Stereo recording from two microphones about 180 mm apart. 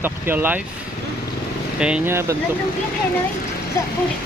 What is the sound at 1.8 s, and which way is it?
Speech, 5° right (ahead or behind).